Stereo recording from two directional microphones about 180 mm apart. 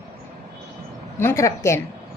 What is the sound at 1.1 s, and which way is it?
Speech, 15° left (ahead or behind).